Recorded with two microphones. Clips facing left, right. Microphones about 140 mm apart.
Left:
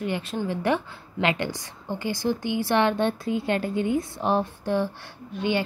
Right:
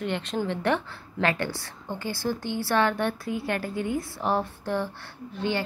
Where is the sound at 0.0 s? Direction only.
5° left (ahead or behind).